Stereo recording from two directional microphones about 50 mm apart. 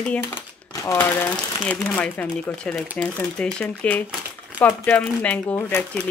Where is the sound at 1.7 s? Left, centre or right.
Left.